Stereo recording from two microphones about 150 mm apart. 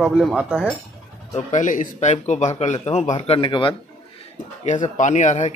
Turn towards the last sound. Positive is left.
turn(degrees=50)  # may be behind; listen again after turning